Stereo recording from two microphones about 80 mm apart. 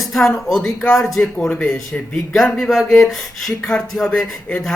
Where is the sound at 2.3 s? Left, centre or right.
Centre.